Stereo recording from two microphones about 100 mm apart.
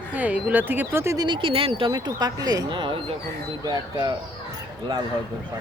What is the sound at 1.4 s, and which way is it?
Speech, 60° right (ahead or behind).